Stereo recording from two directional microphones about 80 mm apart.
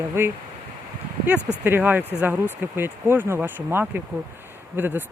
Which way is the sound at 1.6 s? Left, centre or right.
Right.